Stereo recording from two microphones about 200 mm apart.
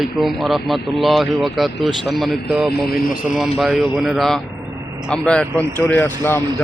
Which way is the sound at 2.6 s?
50° left (ahead or behind).